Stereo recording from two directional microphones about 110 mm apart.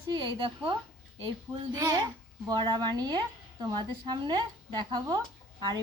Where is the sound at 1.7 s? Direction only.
35° right (ahead or behind).